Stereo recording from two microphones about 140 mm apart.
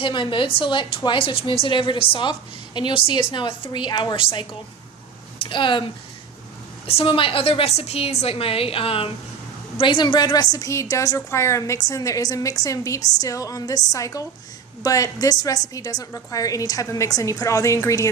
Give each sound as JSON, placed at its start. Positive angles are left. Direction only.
{"t": 0.0, "sound": "a woman's voice", "side_deg": 35}
{"t": 5.5, "sound": "a woman's voice", "side_deg": 35}